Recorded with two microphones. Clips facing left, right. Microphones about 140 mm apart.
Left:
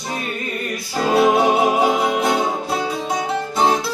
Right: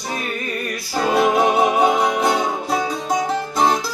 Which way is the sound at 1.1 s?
30° left (ahead or behind).